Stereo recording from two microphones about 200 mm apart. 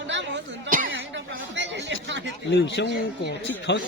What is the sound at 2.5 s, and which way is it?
Speech, 60° left (ahead or behind).